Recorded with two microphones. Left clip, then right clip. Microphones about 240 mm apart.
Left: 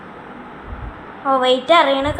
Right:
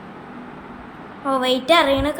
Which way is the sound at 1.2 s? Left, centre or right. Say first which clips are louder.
Left 4 dB; centre.